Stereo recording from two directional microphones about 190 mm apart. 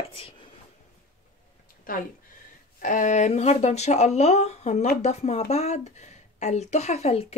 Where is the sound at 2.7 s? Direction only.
40° left (ahead or behind).